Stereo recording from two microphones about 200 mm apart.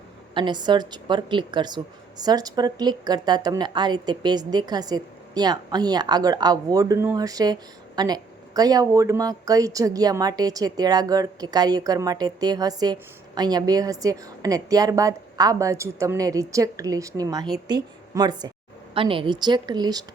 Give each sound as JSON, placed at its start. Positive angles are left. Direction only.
{"t": 0.3, "sound": "a woman's voice", "side_deg": -20}